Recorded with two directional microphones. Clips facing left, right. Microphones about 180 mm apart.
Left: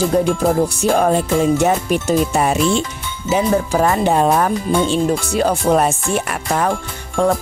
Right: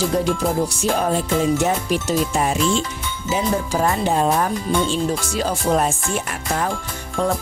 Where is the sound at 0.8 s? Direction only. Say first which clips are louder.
Left 5 dB; 60° left (ahead or behind).